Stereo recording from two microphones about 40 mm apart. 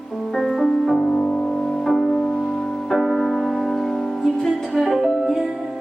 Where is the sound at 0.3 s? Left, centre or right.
Centre.